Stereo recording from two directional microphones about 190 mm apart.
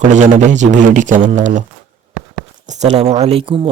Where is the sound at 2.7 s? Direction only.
35° right (ahead or behind).